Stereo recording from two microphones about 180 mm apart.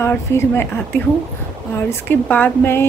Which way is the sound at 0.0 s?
15° left (ahead or behind).